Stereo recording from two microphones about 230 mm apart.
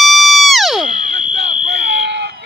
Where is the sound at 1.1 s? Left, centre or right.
Right.